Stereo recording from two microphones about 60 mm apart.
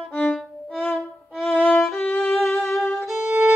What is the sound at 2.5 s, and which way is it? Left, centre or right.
Music, left.